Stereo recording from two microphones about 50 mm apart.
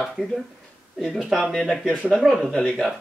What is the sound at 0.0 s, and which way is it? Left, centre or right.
Speech, centre.